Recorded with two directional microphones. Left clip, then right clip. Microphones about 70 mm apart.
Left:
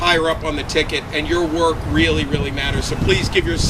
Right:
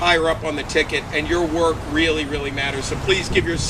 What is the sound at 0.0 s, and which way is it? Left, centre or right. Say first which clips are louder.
Speech: left 1 dB; left.